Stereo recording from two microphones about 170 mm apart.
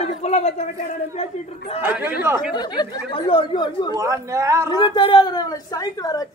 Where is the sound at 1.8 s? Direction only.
10° right (ahead or behind).